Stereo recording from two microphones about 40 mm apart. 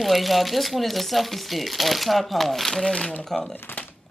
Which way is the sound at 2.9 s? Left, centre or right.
Left.